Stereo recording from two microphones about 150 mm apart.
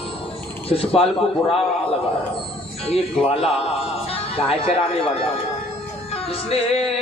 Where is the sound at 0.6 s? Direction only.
40° left (ahead or behind).